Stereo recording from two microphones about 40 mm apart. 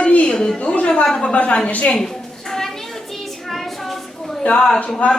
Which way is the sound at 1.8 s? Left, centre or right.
Centre.